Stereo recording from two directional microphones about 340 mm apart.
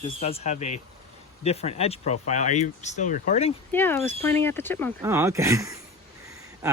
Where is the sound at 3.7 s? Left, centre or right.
Centre.